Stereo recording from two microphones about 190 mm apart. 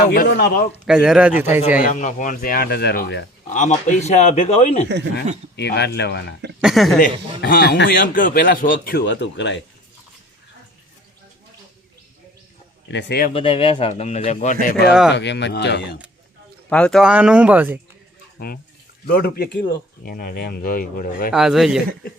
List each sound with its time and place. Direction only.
0.0 s speech: 60° left (ahead or behind)
0.9 s speech: 5° right (ahead or behind)
1.8 s speech: 40° left (ahead or behind); by 3.2 s 55° left (ahead or behind)
3.5 s speech: 40° left (ahead or behind)
5.5 s speech: 60° left (ahead or behind)
6.6 s speech: centre (ahead or behind)
7.0 s speech: 45° left (ahead or behind); by 9.6 s 65° left (ahead or behind)
12.9 s speech: 65° left (ahead or behind)
13.3 s speech: 30° left (ahead or behind)
15.1 s speech: 65° left (ahead or behind)
16.6 s speech: 5° left (ahead or behind)
18.3 s speech: 55° left (ahead or behind)
21.3 s speech: centre (ahead or behind)